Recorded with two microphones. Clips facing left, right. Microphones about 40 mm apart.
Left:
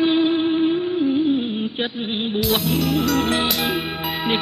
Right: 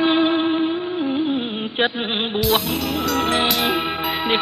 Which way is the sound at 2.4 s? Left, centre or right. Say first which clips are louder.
Left 1 dB; centre.